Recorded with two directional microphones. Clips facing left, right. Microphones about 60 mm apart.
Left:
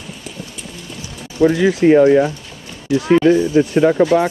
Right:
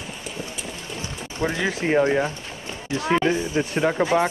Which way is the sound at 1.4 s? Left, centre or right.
Right.